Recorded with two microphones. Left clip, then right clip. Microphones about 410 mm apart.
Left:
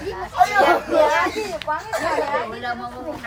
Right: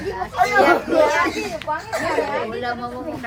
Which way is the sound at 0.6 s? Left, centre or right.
Centre.